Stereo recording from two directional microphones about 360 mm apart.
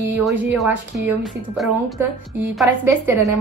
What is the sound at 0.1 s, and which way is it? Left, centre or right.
Speech, centre.